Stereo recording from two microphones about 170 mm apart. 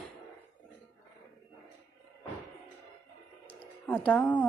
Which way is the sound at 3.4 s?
10° left (ahead or behind).